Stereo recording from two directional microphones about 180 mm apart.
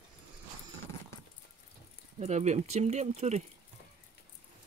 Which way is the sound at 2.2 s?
40° right (ahead or behind).